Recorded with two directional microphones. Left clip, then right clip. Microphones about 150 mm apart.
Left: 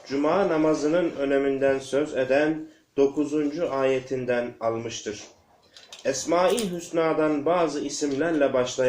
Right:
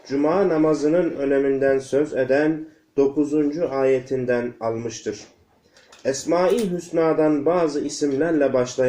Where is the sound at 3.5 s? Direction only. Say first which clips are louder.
Right 2 dB; 40° right (ahead or behind).